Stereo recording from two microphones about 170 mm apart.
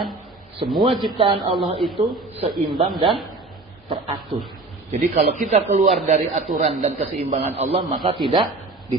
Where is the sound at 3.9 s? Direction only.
30° right (ahead or behind).